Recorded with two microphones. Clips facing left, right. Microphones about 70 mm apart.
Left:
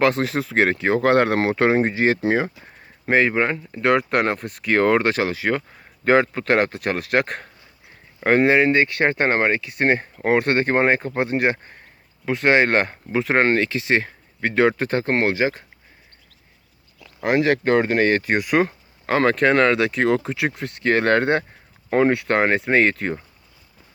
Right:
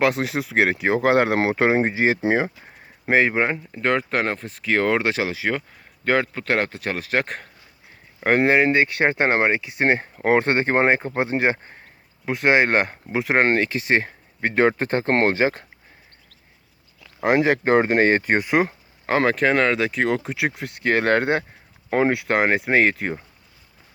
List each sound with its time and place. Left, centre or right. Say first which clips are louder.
0.0 s speech: left 2 dB; centre
3.8 s speech: left 4 dB; centre
6.1 s speech: left 4 dB; centre; by 15.1 s right
15.1 s speech: right 2 dB; right
17.4 s speech: left 2 dB; right
18.5 s a sound: left 1 dB; centre
19.2 s speech: left 3 dB; centre